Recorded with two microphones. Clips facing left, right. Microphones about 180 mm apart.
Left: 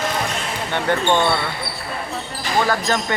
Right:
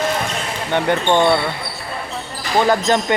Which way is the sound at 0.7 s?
15° right (ahead or behind).